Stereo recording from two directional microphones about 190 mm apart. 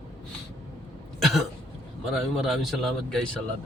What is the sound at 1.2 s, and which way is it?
Cough, centre (ahead or behind).